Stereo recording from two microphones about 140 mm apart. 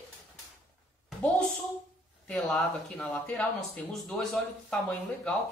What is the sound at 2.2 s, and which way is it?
Speech, 5° left (ahead or behind).